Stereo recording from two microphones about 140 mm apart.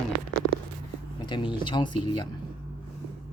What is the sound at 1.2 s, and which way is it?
Speech, 35° left (ahead or behind).